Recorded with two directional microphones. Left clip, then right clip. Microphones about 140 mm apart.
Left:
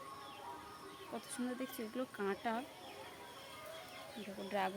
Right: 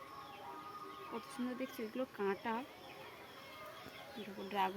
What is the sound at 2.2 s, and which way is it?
Speech, 30° left (ahead or behind).